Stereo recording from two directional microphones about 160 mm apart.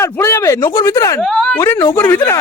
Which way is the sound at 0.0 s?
15° left (ahead or behind).